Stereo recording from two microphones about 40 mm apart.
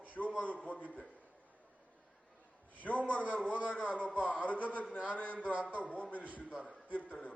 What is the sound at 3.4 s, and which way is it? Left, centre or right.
Speech, right.